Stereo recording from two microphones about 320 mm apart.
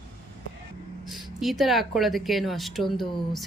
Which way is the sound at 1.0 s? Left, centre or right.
Centre.